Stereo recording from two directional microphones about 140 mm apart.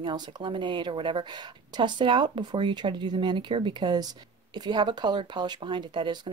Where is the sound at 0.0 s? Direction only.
35° right (ahead or behind).